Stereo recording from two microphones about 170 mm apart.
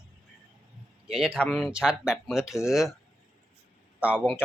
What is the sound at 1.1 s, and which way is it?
Speech, 5° right (ahead or behind).